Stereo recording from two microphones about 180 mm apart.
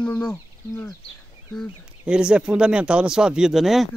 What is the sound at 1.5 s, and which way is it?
Speech, centre (ahead or behind).